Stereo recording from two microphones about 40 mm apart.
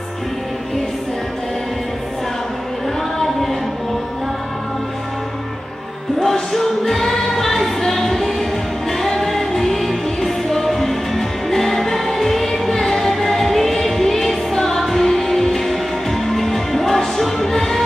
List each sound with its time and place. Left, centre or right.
6.1 s choir: centre
8.9 s music: centre